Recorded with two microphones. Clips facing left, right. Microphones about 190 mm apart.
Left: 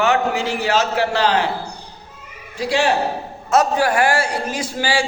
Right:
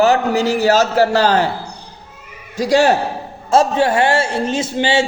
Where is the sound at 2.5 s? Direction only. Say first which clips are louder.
Right 6 dB; 40° right (ahead or behind).